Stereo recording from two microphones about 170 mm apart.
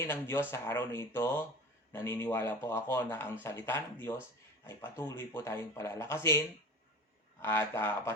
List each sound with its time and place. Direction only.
0.0 s speech: 15° left (ahead or behind)
7.4 s speech: 15° left (ahead or behind)